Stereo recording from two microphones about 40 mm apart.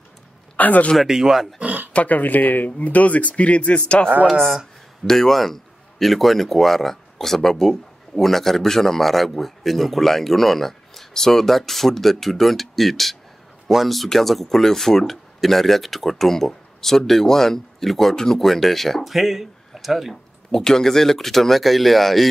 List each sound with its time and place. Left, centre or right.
0.6 s a man's voice: left
1.0 s speech: centre
1.6 s a sound: right
2.0 s speech: left
5.0 s a man's voice: centre
20.5 s a man's voice: centre